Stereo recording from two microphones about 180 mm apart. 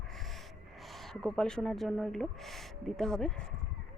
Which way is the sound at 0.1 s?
Centre (ahead or behind).